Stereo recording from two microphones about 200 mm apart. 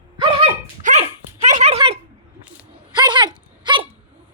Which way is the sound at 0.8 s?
35° right (ahead or behind).